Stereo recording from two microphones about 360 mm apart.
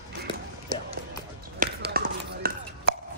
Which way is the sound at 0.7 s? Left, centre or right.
Right.